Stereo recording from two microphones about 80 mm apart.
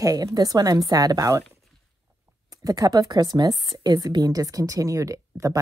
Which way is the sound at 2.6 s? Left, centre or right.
Right.